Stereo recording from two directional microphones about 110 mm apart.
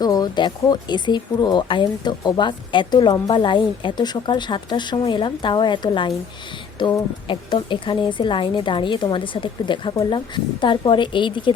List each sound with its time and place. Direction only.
0.0 s speech: 35° left (ahead or behind)